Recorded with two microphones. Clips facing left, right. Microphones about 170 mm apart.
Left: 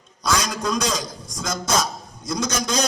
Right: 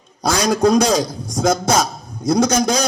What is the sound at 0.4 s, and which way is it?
Speech, 65° right (ahead or behind).